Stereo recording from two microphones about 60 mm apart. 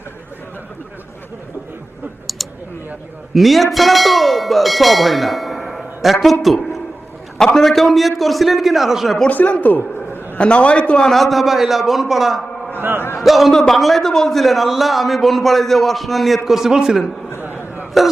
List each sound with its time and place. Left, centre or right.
3.3 s speech: centre
6.4 s a sound: centre
7.3 s a man's voice: centre
9.3 s a man's voice: left
11.1 s a man's voice: centre
12.7 s a sound: right
13.0 s a man's voice: left
13.2 s a man's voice: centre
17.4 s a sound: right